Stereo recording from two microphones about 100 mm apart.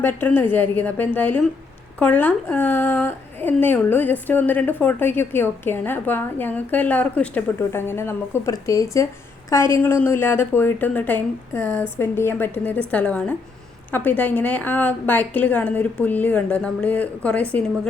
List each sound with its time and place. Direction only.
0.0 s a woman's voice: 20° left (ahead or behind)